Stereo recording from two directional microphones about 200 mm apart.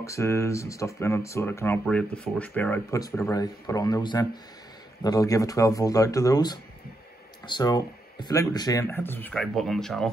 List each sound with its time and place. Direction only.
0.0 s speech: 15° left (ahead or behind)